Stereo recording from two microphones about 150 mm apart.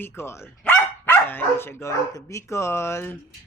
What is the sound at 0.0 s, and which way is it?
Speech, 15° left (ahead or behind).